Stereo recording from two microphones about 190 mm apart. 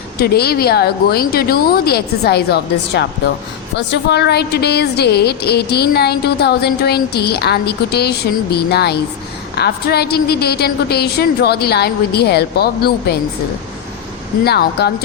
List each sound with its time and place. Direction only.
0.2 s a woman's voice: 55° left (ahead or behind)
14.4 s a woman's voice: 60° left (ahead or behind)